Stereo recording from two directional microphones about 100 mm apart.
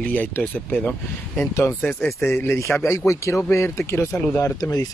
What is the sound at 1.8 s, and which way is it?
A man's voice, 15° left (ahead or behind).